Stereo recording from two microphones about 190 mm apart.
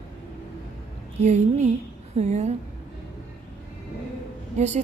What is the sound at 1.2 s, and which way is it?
A woman's voice, 35° right (ahead or behind).